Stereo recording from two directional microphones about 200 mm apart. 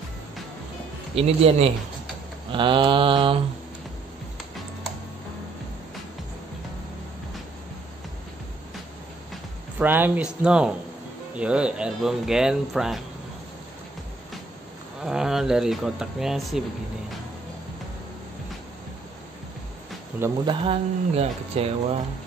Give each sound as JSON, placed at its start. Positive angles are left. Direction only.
{"t": 1.1, "sound": "a man's voice", "side_deg": -30}
{"t": 9.3, "sound": "speech", "side_deg": -10}
{"t": 15.0, "sound": "speech", "side_deg": -5}
{"t": 20.4, "sound": "speech", "side_deg": -30}